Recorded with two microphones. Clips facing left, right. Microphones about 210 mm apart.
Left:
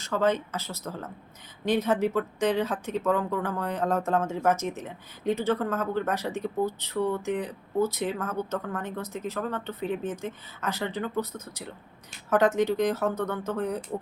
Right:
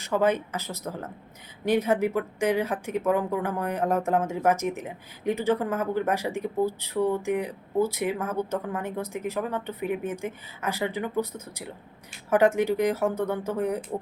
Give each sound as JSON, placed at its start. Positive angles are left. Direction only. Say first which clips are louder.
{"t": 0.0, "sound": "speech", "louder": "right 2 dB", "side_deg": -15}